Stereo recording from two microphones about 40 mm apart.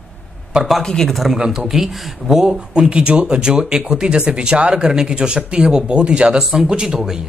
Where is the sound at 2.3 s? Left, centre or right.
Centre.